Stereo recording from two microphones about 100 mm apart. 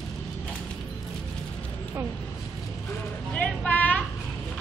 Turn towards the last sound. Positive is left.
turn(degrees=15)  # may be behind; listen again after turning